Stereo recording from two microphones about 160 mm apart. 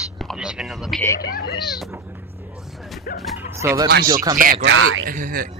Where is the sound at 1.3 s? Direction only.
85° left.